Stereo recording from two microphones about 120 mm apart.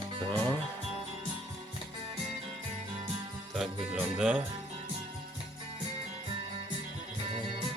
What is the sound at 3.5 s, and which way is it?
Music, 5° right (ahead or behind).